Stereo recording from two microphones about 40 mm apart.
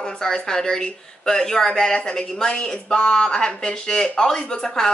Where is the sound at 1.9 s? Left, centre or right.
Left.